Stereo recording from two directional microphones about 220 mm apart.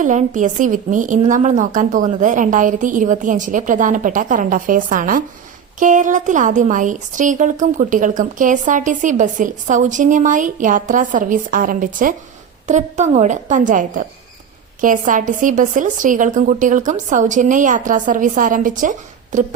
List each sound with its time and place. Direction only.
0.0 s a woman's voice: 35° right (ahead or behind)